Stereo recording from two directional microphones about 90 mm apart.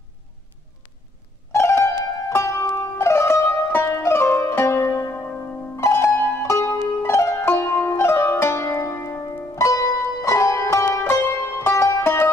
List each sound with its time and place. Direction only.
1.5 s music: 30° left (ahead or behind)